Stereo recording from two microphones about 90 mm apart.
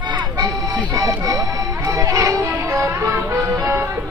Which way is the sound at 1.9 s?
35° right (ahead or behind).